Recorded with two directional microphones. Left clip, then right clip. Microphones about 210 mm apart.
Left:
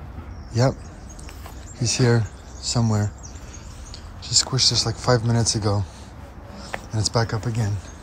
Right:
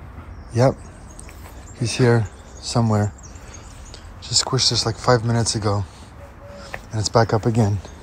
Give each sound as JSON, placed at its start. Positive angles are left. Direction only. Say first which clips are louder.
{"t": 1.8, "sound": "speech", "louder": "right 3 dB", "side_deg": 5}
{"t": 4.2, "sound": "speech", "louder": "even", "side_deg": 5}
{"t": 6.6, "sound": "a sound", "louder": "left 1 dB", "side_deg": 10}
{"t": 7.2, "sound": "speech", "louder": "right 9 dB", "side_deg": -5}